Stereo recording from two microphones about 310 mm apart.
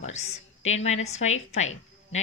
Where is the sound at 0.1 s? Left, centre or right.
Left.